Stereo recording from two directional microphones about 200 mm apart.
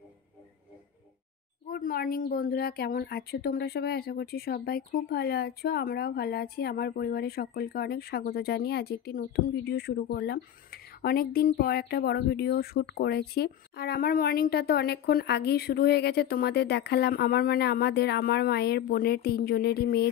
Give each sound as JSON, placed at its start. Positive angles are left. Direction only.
{"t": 1.7, "sound": "speech", "side_deg": 45}